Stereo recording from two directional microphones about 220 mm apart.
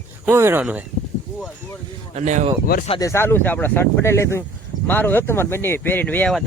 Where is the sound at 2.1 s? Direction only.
30° right (ahead or behind).